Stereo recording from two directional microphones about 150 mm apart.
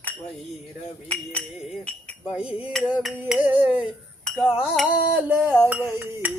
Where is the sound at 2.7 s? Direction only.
5° right (ahead or behind).